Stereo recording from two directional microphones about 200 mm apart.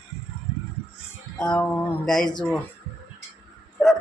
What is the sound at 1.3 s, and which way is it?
Speech, 5° left (ahead or behind).